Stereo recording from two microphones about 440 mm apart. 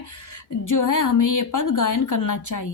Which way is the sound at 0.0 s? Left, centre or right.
Left.